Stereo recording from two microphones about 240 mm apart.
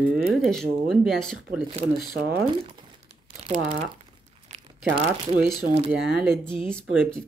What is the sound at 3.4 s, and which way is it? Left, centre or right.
Speech, right.